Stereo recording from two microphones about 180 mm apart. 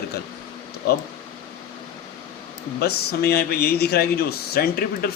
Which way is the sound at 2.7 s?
60° left (ahead or behind).